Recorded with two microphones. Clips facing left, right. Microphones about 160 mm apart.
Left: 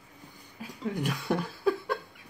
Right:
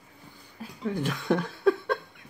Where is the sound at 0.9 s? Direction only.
10° left (ahead or behind).